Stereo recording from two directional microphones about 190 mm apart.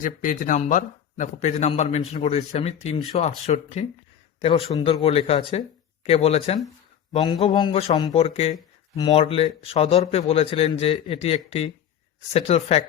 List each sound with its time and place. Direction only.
0.0 s a man's voice: 45° left (ahead or behind)
9.0 s a man's voice: 20° left (ahead or behind)